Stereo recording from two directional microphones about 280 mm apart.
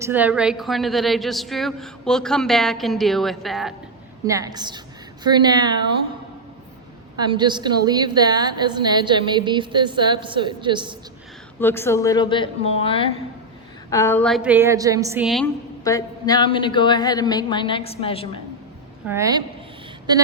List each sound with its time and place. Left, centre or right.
0.0 s a woman's voice: centre
4.3 s a woman's voice: centre
7.2 s a woman's voice: centre
11.6 s a woman's voice: centre
13.9 s a woman's voice: centre
15.8 s a woman's voice: centre
19.0 s a woman's voice: centre